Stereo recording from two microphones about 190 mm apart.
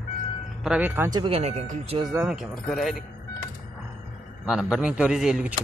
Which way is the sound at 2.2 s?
Centre (ahead or behind).